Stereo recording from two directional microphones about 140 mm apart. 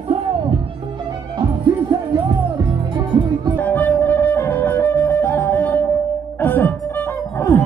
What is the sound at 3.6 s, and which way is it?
Music, 10° left (ahead or behind).